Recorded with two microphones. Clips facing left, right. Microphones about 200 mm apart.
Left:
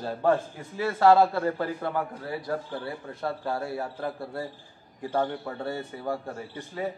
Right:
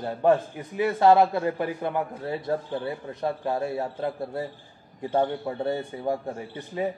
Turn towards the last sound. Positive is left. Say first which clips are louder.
# right 3 dB
turn(degrees=-20)  # may be behind; listen again after turning